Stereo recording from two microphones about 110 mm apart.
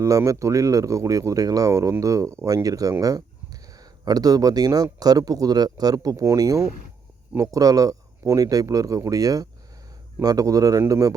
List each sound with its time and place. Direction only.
0.0 s speech: 30° right (ahead or behind)